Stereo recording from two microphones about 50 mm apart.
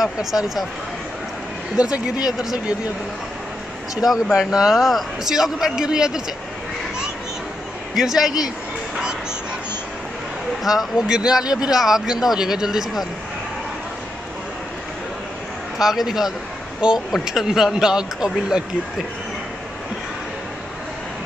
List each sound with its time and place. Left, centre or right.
0.0 s a man's voice: centre
1.8 s speech: centre
3.9 s a man's voice: centre
7.9 s a man's voice: centre
10.6 s speech: centre
11.1 s a man's voice: centre
15.8 s a man's voice: centre